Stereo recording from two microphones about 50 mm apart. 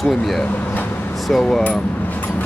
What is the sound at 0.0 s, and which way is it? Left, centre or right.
Speech, centre.